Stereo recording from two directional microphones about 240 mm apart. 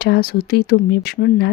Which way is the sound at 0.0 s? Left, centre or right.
Left.